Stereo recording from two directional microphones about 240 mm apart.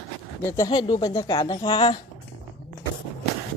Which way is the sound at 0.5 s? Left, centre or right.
Centre.